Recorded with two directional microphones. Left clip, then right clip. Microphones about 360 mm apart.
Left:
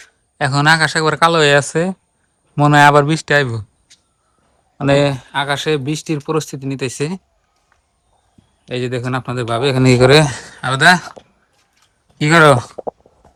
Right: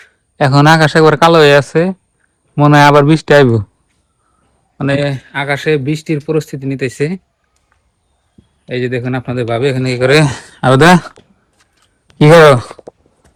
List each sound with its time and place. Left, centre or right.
0.3 s speech: centre
4.8 s speech: centre
8.6 s speech: centre
9.8 s speech: left
10.1 s speech: centre
12.1 s speech: centre